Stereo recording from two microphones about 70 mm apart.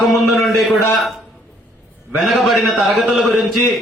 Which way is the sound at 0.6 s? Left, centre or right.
Centre.